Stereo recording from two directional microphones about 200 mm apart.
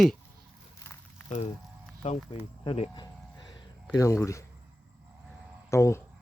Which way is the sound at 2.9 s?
20° left (ahead or behind).